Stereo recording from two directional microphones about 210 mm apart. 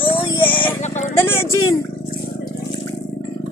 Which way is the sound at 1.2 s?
10° left (ahead or behind).